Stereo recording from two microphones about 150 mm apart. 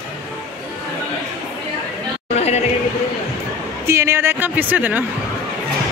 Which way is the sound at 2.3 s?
45° left (ahead or behind).